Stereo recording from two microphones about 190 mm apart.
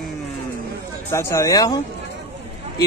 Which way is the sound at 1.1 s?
15° left (ahead or behind).